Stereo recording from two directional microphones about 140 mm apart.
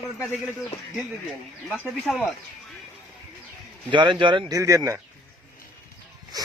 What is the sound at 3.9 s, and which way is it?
Speech, 35° right (ahead or behind).